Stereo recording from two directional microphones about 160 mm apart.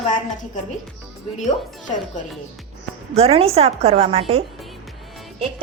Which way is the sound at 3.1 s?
40° right (ahead or behind).